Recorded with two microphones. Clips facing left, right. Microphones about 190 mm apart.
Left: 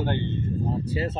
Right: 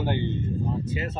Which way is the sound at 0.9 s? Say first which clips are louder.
Left 3 dB; 35° left (ahead or behind).